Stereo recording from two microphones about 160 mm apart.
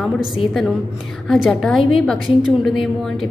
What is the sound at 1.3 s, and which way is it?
A woman's voice, centre (ahead or behind).